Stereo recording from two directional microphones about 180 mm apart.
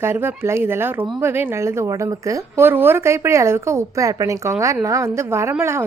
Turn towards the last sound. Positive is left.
turn(degrees=-15)  # may be behind; listen again after turning